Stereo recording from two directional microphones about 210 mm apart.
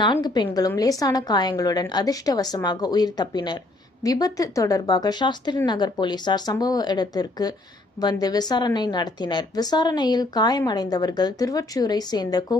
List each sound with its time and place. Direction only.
0.0 s a woman's voice: 20° left (ahead or behind)